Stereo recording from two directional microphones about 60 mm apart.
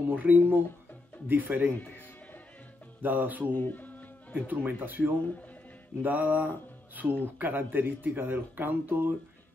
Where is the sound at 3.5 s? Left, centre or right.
Left.